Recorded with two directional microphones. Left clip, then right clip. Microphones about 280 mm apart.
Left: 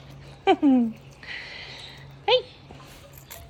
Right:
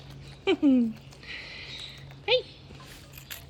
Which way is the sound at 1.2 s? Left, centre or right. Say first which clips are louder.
Left 4 dB; left.